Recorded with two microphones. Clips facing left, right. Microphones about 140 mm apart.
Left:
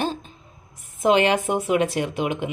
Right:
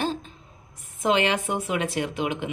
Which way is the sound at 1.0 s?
15° left (ahead or behind).